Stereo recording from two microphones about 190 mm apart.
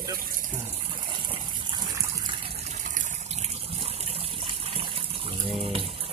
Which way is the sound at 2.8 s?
40° right (ahead or behind).